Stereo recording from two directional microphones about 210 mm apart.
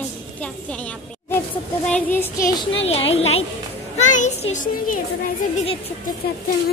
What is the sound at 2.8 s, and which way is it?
A child's voice, 25° left (ahead or behind).